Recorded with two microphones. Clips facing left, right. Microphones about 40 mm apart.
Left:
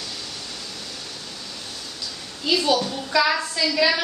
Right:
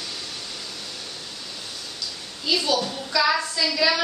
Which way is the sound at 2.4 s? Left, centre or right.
Centre.